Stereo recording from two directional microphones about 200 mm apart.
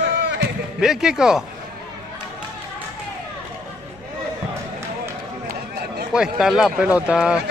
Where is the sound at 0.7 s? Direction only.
Centre (ahead or behind).